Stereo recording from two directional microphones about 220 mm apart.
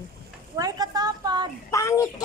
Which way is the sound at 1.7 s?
15° left (ahead or behind).